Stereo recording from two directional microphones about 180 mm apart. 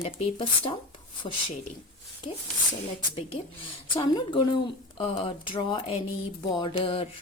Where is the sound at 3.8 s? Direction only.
25° left (ahead or behind).